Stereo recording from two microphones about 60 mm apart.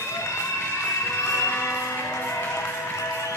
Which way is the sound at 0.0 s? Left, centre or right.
Left.